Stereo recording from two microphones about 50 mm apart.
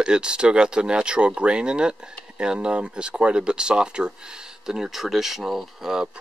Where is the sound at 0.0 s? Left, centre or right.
Centre.